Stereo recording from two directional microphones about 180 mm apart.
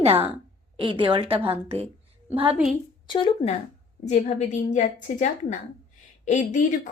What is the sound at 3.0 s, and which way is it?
Speech, 25° left (ahead or behind).